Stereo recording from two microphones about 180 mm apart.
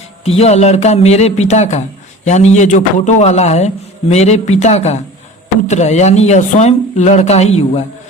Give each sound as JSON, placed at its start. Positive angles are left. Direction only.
{"t": 0.3, "sound": "speech", "side_deg": 35}